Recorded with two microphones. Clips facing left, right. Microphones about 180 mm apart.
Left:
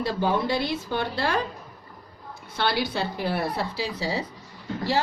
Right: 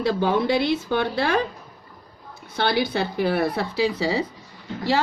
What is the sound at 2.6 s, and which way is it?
A woman's voice, 50° right (ahead or behind).